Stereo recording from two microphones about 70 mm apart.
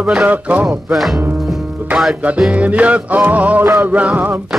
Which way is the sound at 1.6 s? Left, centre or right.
Right.